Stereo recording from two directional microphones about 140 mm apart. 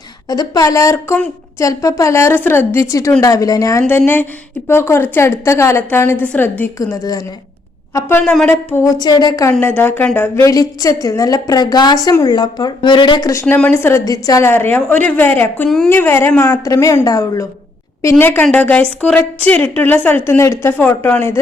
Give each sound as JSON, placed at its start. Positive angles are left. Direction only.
{"t": 0.3, "sound": "a woman's voice", "side_deg": 25}
{"t": 6.7, "sound": "a woman's voice", "side_deg": 25}
{"t": 7.9, "sound": "a woman's voice", "side_deg": 15}
{"t": 8.9, "sound": "a woman's voice", "side_deg": 30}
{"t": 10.2, "sound": "a woman's voice", "side_deg": 25}
{"t": 13.5, "sound": "a woman's voice", "side_deg": 15}